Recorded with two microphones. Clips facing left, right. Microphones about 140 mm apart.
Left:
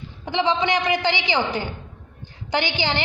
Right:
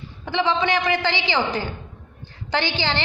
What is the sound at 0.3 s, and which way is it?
A woman's voice, 20° left (ahead or behind).